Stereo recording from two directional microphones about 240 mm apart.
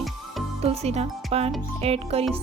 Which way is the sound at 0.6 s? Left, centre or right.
Right.